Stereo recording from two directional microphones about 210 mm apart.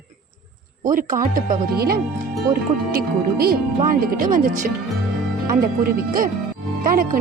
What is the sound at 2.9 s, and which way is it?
Speech, 45° right (ahead or behind).